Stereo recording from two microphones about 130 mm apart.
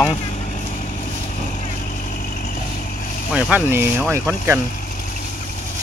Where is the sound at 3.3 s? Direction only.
10° right (ahead or behind).